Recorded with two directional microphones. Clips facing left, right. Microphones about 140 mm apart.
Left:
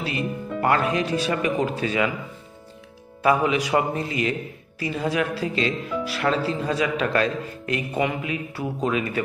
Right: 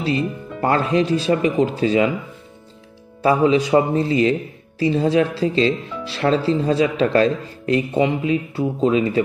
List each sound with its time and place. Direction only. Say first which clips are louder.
0.0 s speech: right 6 dB; 30° right (ahead or behind)
3.2 s speech: right 5 dB; 30° right (ahead or behind)